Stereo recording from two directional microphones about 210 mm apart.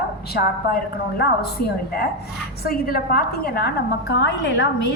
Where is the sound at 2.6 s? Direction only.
45° left (ahead or behind).